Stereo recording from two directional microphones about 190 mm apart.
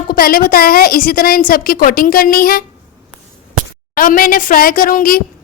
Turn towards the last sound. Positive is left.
turn(degrees=45)  # may be behind; listen again after turning